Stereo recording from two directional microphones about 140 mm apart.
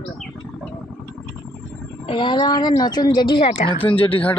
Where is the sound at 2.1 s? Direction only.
35° left (ahead or behind).